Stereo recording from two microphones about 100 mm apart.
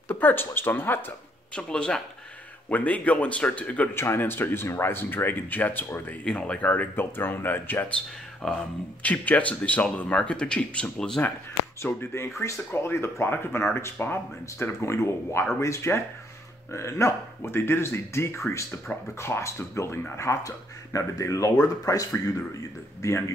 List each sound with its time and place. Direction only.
0.1 s speech: 20° left (ahead or behind)
1.5 s speech: 10° left (ahead or behind)
8.4 s speech: 5° left (ahead or behind)
9.0 s speech: 15° left (ahead or behind)
11.8 s speech: 25° left (ahead or behind)